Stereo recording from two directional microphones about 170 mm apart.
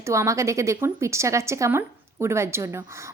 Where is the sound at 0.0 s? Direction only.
15° right (ahead or behind).